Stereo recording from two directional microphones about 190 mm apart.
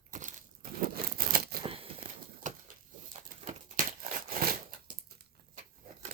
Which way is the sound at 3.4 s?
40° right (ahead or behind).